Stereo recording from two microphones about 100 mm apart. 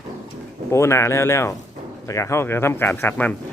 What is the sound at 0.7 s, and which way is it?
Speech, 25° left (ahead or behind).